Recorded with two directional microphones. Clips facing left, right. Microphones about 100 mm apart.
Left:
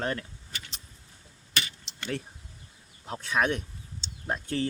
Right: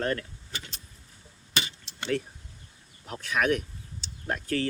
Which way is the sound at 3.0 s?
30° left (ahead or behind).